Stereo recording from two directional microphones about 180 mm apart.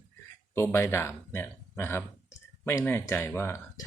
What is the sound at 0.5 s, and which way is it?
Speech, 15° left (ahead or behind).